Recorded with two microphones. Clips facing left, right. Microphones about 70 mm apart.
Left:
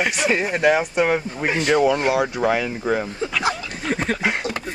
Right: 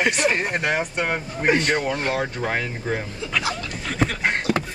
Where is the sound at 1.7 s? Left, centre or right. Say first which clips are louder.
Left 6 dB; left.